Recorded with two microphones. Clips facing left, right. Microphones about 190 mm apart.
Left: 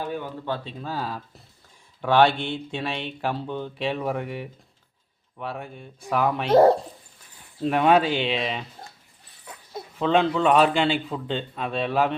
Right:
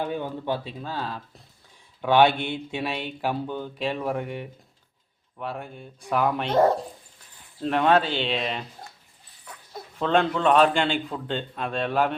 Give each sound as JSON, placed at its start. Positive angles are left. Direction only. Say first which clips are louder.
{"t": 0.0, "sound": "speech", "louder": "right 2 dB", "side_deg": -15}
{"t": 0.9, "sound": "speech", "louder": "left 3 dB", "side_deg": 5}
{"t": 2.0, "sound": "speech", "louder": "even", "side_deg": -5}
{"t": 6.5, "sound": "speech", "louder": "left 5 dB", "side_deg": 35}
{"t": 7.6, "sound": "speech", "louder": "left 2 dB", "side_deg": 5}
{"t": 10.0, "sound": "speech", "louder": "left 1 dB", "side_deg": 5}